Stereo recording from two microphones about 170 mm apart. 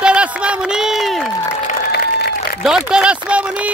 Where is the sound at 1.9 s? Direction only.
70° left (ahead or behind).